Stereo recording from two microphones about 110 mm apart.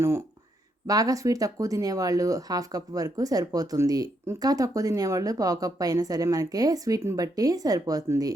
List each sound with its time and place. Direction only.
0.9 s a woman's voice: 35° right (ahead or behind)